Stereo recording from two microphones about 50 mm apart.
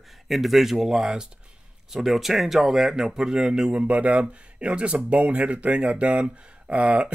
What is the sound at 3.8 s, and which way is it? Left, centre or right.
Speech, right.